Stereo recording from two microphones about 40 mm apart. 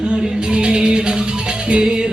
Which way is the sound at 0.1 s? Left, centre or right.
Right.